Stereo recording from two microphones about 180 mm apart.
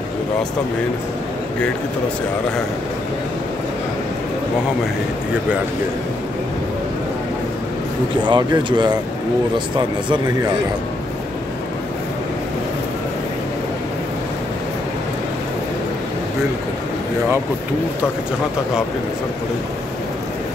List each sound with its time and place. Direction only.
8.3 s speech: 25° right (ahead or behind)